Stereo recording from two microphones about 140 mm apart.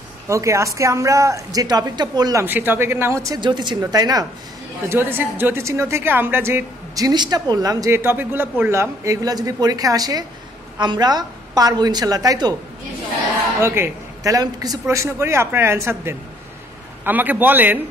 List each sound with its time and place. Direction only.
0.3 s speech: 20° right (ahead or behind)
2.4 s a man's voice: 15° right (ahead or behind)
3.3 s a woman's voice: 35° right (ahead or behind)
4.8 s a man's voice: 15° right (ahead or behind)
7.1 s speech: 30° right (ahead or behind)
13.6 s a man's voice: 15° right (ahead or behind)